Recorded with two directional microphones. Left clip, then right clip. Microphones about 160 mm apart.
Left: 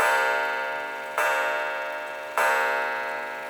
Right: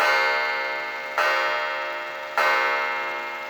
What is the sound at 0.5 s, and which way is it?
Tick-tock, 10° right (ahead or behind).